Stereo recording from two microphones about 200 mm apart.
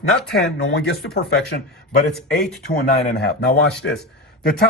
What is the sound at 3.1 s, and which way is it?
Speech, 55° left (ahead or behind).